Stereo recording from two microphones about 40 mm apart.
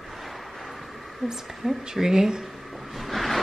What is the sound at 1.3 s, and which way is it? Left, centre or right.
A woman's voice, centre.